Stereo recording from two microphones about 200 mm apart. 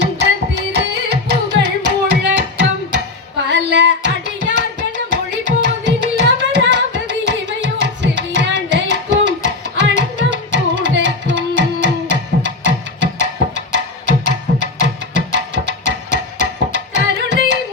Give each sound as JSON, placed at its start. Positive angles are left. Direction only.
{"t": 0.0, "sound": "tabla", "side_deg": -60}
{"t": 2.0, "sound": "music", "side_deg": -60}